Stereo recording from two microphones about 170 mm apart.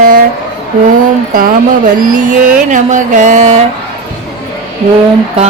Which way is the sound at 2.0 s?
55° right (ahead or behind).